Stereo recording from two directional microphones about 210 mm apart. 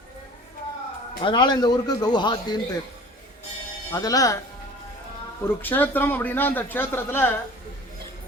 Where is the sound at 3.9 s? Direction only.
15° left (ahead or behind).